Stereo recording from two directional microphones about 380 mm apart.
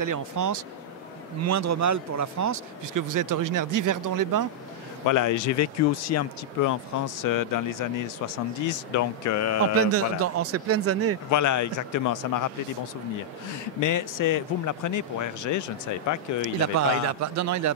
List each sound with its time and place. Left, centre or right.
0.0 s speech: right
5.0 s speech: left
7.2 s speech: left
8.6 s speech: left
9.8 s speech: right
11.2 s speech: left
13.7 s speech: left
16.7 s speech: right